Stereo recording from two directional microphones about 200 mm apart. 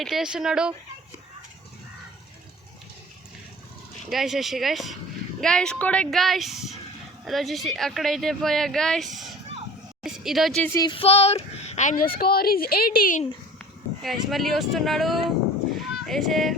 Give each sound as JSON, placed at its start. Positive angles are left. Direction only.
{"t": 0.0, "sound": "speech", "side_deg": 0}
{"t": 4.1, "sound": "speech", "side_deg": 0}
{"t": 10.8, "sound": "speech", "side_deg": 25}
{"t": 13.6, "sound": "speech", "side_deg": 0}